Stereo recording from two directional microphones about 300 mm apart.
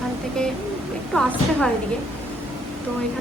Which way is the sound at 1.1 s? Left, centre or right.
Centre.